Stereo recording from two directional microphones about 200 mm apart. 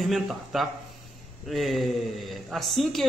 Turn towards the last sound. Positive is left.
turn(degrees=0)  # may be behind; listen again after turning